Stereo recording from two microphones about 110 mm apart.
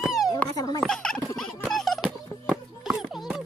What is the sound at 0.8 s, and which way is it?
Turkey, 5° left (ahead or behind).